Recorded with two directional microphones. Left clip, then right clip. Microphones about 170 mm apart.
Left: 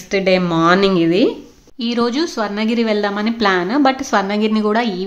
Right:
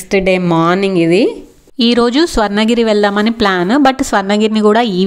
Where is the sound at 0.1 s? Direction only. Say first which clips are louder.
Right 3 dB; 40° right (ahead or behind).